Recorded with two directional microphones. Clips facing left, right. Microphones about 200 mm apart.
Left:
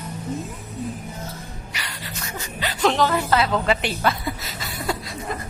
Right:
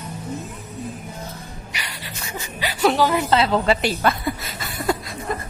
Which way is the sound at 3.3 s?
30° right (ahead or behind).